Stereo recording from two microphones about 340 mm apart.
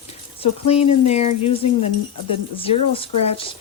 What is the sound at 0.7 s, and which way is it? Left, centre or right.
Speech, centre.